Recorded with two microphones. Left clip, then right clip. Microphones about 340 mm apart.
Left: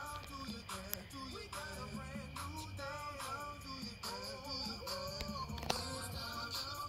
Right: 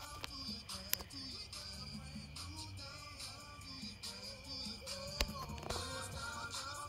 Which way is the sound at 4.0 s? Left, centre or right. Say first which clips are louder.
Left 4 dB; centre.